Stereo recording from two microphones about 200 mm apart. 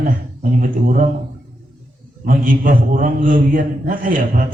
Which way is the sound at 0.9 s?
40° right (ahead or behind).